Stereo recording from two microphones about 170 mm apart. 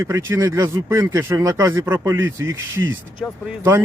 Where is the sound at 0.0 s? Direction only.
15° right (ahead or behind).